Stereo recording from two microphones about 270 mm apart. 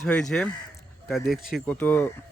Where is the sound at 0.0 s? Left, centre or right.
Centre.